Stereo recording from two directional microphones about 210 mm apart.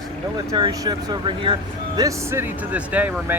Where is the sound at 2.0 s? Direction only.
15° right (ahead or behind).